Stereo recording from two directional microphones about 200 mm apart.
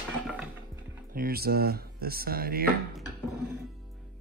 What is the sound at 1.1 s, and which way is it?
Speech, 50° right (ahead or behind).